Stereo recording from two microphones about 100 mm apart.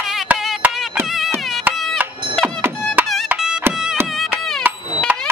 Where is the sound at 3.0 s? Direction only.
20° right (ahead or behind).